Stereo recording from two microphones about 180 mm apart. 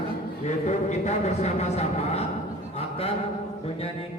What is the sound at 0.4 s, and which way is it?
A man's voice, 40° left (ahead or behind).